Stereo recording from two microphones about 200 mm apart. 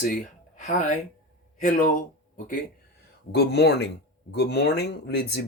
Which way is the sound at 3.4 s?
55° left (ahead or behind).